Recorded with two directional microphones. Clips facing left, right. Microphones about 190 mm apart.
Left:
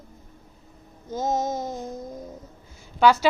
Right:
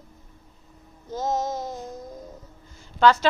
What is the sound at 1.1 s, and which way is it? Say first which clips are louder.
Child singing: left 1 dB; 20° left (ahead or behind).